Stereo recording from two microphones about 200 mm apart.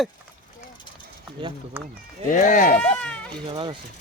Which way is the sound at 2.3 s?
40° left (ahead or behind).